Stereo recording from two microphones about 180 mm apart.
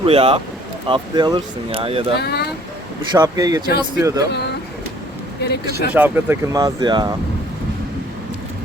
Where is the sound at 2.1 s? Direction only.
65° left (ahead or behind).